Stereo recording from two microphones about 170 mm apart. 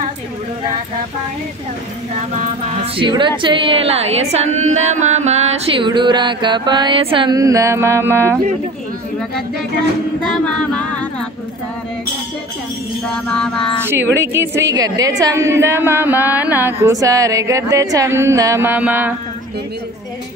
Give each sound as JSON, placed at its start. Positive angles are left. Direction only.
{"t": 2.8, "sound": "a woman's voice", "side_deg": -30}
{"t": 5.9, "sound": "mantra", "side_deg": -25}
{"t": 13.1, "sound": "music", "side_deg": 5}
{"t": 14.1, "sound": "a woman's voice", "side_deg": -15}